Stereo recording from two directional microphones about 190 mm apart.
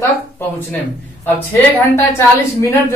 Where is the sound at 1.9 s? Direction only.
15° left (ahead or behind).